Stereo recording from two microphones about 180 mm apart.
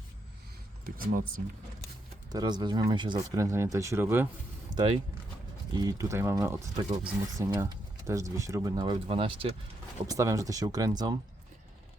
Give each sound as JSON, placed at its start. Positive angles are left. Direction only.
{"t": 0.9, "sound": "speech", "side_deg": -50}
{"t": 2.3, "sound": "speech", "side_deg": -20}
{"t": 4.7, "sound": "a sound", "side_deg": -20}
{"t": 5.7, "sound": "speech", "side_deg": -20}
{"t": 10.1, "sound": "speech", "side_deg": -20}